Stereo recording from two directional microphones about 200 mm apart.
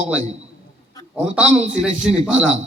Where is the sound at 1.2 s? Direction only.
5° right (ahead or behind).